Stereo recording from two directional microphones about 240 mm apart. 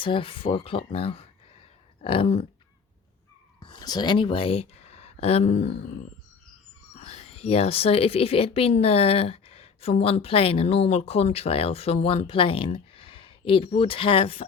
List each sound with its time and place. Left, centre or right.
0.0 s speech: left
3.6 s speech: centre
7.1 s speech: left